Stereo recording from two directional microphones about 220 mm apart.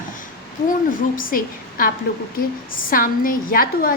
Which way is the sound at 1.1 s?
40° left (ahead or behind).